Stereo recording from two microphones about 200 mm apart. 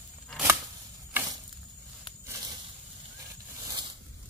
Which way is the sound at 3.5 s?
20° right (ahead or behind).